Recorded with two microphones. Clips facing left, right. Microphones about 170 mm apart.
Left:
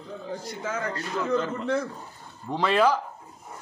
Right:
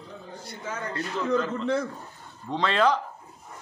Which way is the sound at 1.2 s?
5° left (ahead or behind).